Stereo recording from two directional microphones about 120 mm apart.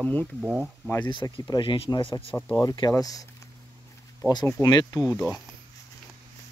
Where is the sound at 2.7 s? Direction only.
35° left (ahead or behind).